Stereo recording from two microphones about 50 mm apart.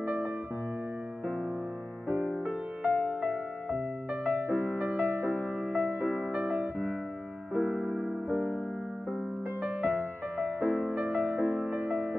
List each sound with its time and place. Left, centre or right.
0.0 s music: right
2.4 s music: right
7.6 s music: centre
9.6 s music: right